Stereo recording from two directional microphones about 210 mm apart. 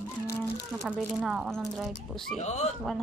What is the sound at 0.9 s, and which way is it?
Speech, 5° right (ahead or behind).